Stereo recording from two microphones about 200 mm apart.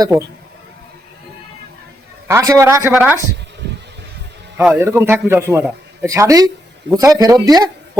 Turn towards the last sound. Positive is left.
turn(degrees=-20)  # may be behind; listen again after turning